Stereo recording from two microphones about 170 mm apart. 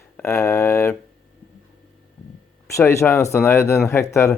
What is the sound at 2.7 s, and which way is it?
Speech, 15° left (ahead or behind).